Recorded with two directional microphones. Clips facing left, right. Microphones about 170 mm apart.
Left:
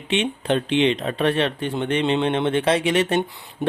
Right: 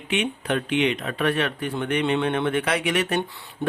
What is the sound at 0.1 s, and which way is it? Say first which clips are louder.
Speech: left 3 dB; 25° left (ahead or behind).